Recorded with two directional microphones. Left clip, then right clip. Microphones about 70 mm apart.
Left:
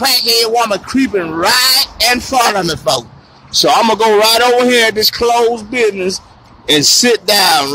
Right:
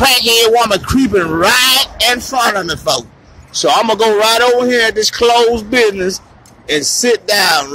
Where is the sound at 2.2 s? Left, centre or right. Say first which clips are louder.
Left 2 dB; left.